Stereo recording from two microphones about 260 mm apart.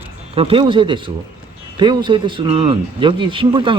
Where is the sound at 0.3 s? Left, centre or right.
Right.